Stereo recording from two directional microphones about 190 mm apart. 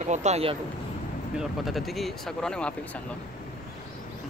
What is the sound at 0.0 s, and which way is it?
Speech, 35° right (ahead or behind).